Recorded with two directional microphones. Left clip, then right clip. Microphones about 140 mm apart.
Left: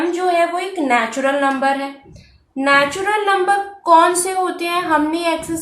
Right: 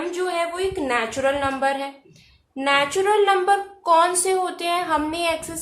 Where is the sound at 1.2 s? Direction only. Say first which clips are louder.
Left 5 dB; 40° right (ahead or behind).